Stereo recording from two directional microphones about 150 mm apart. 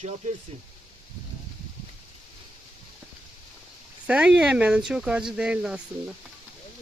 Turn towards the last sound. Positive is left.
turn(degrees=-5)  # may be behind; listen again after turning